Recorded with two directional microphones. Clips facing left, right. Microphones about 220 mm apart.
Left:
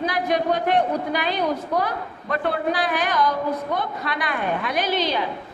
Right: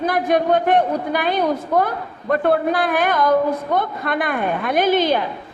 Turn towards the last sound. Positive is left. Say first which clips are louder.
# right 6 dB
turn(degrees=-50)  # may be behind; listen again after turning